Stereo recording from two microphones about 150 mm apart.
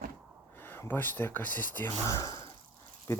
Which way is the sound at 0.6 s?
15° left (ahead or behind).